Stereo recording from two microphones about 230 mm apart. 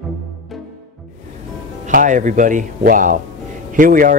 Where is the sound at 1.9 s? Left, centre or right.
Right.